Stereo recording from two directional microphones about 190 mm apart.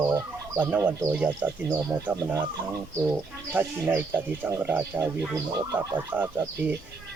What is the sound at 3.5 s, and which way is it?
Speech, 10° right (ahead or behind).